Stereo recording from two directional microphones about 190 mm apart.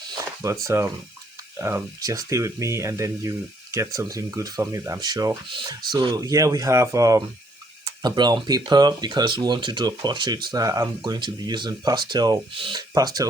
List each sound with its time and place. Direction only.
0.2 s speech: 15° right (ahead or behind)